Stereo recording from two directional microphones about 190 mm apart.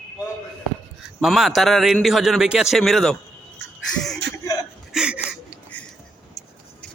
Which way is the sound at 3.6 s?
70° right (ahead or behind).